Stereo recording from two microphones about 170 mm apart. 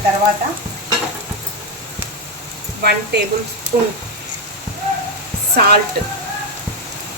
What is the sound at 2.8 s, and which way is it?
Speech, 70° right (ahead or behind).